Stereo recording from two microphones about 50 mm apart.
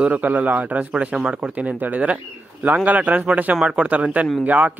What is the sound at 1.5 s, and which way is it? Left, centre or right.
Speech, right.